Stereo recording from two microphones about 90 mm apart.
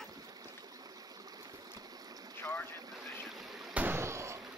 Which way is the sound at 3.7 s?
20° right (ahead or behind).